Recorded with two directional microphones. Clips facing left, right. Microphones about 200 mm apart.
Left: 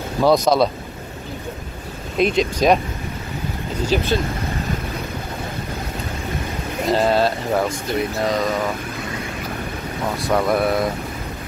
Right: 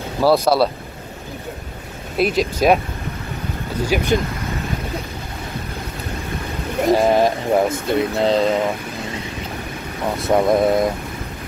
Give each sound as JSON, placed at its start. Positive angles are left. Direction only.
{"t": 0.2, "sound": "speech", "side_deg": -5}
{"t": 2.1, "sound": "speech", "side_deg": -5}
{"t": 3.9, "sound": "speech", "side_deg": -15}
{"t": 6.9, "sound": "speech", "side_deg": -15}
{"t": 7.8, "sound": "speech", "side_deg": -25}
{"t": 10.2, "sound": "speech", "side_deg": -20}